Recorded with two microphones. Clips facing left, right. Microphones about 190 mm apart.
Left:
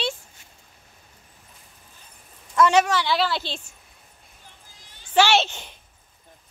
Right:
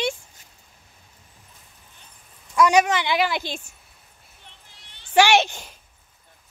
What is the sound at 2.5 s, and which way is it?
A woman's voice, 15° right (ahead or behind).